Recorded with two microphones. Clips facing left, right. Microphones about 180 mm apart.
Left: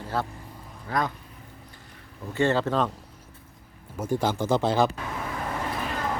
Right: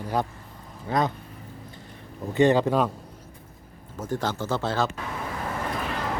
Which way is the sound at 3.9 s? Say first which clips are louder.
Left 3 dB; 10° left (ahead or behind).